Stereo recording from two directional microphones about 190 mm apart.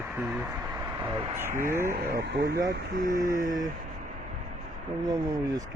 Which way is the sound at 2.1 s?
55° right (ahead or behind).